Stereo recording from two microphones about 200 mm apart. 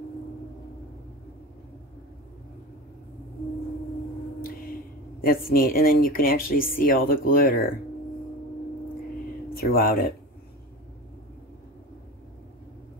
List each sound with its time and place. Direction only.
5.2 s speech: 45° left (ahead or behind)
9.5 s speech: 50° left (ahead or behind)